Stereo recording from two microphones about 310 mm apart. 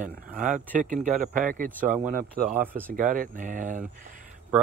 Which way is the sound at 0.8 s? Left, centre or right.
Right.